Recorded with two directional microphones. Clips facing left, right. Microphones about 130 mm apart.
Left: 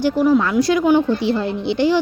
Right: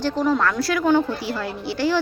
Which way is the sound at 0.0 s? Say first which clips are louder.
Left 5 dB; 10° left (ahead or behind).